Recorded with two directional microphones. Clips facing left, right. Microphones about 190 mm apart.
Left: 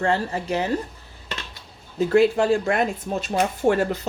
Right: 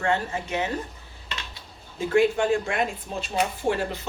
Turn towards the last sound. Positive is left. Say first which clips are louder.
# left 6 dB
turn(degrees=45)  # may be behind; listen again after turning